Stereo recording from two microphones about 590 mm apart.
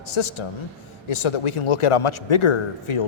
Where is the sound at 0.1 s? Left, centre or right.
Left.